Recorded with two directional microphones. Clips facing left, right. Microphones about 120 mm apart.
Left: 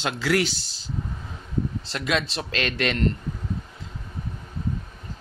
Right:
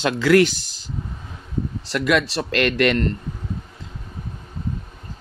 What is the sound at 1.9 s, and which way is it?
A man's voice, 60° right (ahead or behind).